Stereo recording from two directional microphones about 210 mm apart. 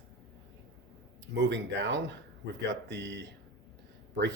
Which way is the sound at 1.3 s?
60° right (ahead or behind).